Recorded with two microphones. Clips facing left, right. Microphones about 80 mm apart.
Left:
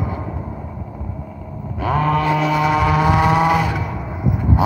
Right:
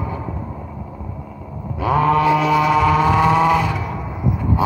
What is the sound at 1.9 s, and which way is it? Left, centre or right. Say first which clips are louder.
Mantra: right 3 dB; centre.